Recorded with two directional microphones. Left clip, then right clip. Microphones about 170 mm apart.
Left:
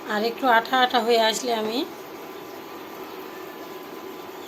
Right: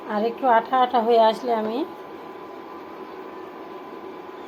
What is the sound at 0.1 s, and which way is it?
A woman's voice, 5° right (ahead or behind).